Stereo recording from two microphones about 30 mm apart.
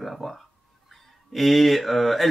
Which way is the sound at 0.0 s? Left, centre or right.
Centre.